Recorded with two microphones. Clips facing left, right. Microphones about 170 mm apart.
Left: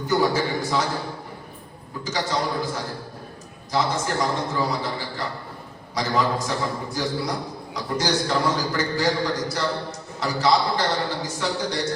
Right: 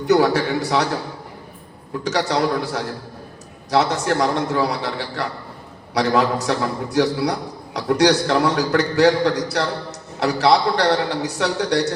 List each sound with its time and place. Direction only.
0.0 s a man's voice: 75° right (ahead or behind)
2.0 s a man's voice: 70° right (ahead or behind)